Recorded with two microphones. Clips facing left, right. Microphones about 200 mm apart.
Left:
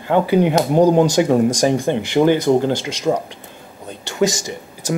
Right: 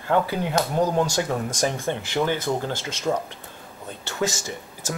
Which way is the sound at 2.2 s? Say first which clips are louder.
Left 11 dB; 30° left (ahead or behind).